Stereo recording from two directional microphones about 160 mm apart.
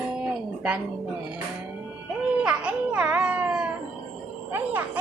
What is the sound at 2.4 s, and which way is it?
A child's voice, 5° right (ahead or behind).